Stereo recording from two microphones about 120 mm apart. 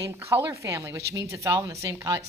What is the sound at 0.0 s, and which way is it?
Speech, 25° right (ahead or behind).